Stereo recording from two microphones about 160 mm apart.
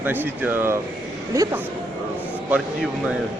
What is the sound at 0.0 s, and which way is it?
A woman's voice, 10° right (ahead or behind).